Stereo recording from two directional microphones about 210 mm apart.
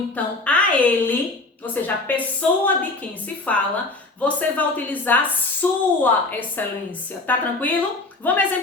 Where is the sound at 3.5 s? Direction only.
5° left (ahead or behind).